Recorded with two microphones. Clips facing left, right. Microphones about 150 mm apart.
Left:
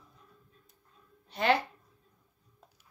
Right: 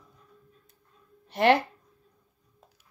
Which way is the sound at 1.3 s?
75° right (ahead or behind).